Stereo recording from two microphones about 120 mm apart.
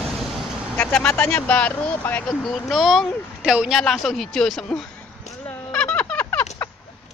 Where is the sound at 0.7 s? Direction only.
15° left (ahead or behind).